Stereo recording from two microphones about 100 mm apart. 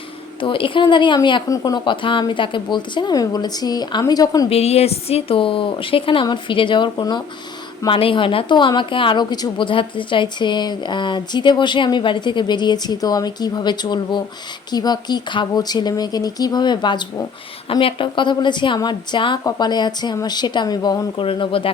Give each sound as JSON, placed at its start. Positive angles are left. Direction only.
{"t": 0.4, "sound": "a woman's voice", "side_deg": 60}
{"t": 1.5, "sound": "speech", "side_deg": 40}
{"t": 1.8, "sound": "a woman's voice", "side_deg": 55}
{"t": 4.4, "sound": "a woman's voice", "side_deg": 90}
{"t": 7.9, "sound": "a woman's voice", "side_deg": 60}
{"t": 17.7, "sound": "a woman's voice", "side_deg": 65}
{"t": 21.2, "sound": "a woman's voice", "side_deg": 60}